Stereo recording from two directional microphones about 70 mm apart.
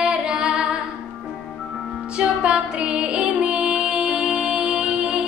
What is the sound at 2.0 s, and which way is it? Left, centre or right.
Music, centre.